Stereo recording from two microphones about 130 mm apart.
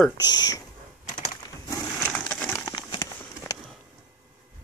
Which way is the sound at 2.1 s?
10° left (ahead or behind).